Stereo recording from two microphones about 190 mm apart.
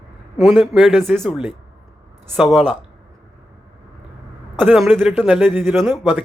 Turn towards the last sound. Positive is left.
turn(degrees=-10)  # may be behind; listen again after turning